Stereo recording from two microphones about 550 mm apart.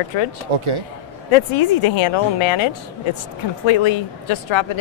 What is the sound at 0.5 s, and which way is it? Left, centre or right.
Speech, right.